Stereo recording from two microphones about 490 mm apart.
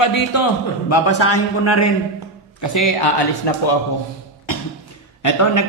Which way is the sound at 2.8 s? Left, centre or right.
Left.